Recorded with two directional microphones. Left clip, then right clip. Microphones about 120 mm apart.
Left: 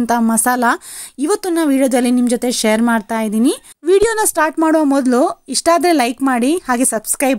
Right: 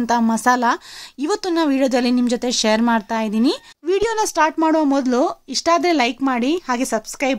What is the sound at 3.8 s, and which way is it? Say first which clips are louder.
Speech: left 6 dB; 40° left (ahead or behind).